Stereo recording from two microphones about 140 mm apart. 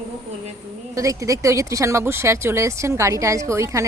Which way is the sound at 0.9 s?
25° right (ahead or behind).